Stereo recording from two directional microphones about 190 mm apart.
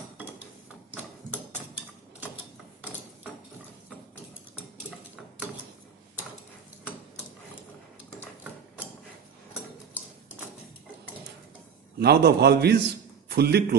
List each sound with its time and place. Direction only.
12.0 s a man's voice: 55° right (ahead or behind)